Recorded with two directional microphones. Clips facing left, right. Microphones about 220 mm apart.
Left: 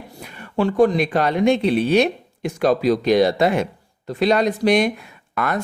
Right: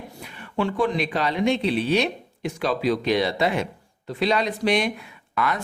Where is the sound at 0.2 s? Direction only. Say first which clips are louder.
Left 5 dB; 45° left (ahead or behind).